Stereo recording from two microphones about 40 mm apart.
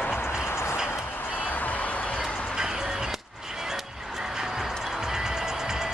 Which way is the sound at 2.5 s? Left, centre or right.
Centre.